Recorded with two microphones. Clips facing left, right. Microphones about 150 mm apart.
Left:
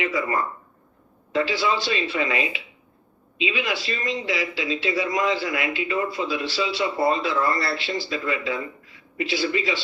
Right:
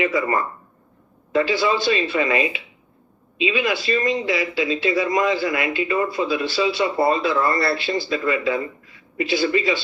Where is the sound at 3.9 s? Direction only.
50° right (ahead or behind).